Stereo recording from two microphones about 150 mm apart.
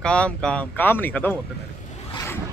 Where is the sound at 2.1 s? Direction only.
15° left (ahead or behind).